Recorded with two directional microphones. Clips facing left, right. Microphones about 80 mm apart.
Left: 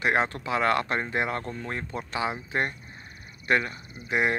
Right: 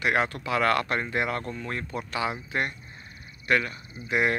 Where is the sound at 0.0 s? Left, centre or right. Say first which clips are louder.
Left 1 dB; left.